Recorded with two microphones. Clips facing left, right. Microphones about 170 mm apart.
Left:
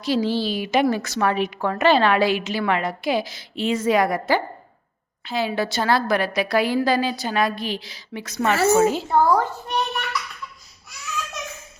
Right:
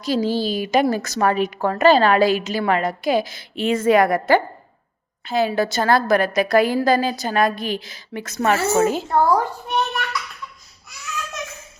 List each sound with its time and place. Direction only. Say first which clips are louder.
0.0 s a woman's voice: right 1 dB; 40° right (ahead or behind)
9.3 s a child's voice: right 1 dB; 10° right (ahead or behind)